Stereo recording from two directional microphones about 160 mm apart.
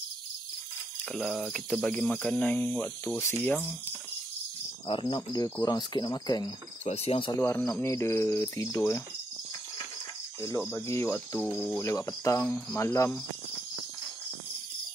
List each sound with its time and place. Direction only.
1.0 s speech: centre (ahead or behind)
3.2 s cricket: 15° left (ahead or behind)
5.1 s speech: 25° left (ahead or behind)
6.8 s speech: 40° left (ahead or behind)
7.3 s cricket: 15° left (ahead or behind)
10.7 s cricket: 15° left (ahead or behind)